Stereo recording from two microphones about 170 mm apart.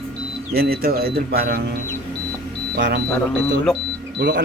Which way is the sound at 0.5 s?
65° right (ahead or behind).